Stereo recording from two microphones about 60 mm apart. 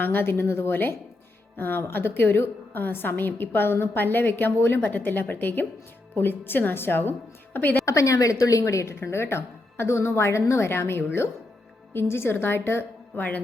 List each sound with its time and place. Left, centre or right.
0.0 s a woman's voice: left
7.9 s a woman's voice: left
9.0 s speech: left
13.1 s a woman's voice: left